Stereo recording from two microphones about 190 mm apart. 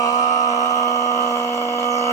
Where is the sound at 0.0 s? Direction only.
35° left (ahead or behind).